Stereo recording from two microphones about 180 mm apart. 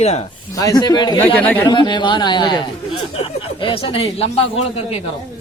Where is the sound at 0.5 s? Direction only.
20° left (ahead or behind).